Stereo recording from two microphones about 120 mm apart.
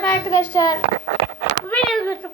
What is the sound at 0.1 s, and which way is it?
Speech, 25° left (ahead or behind).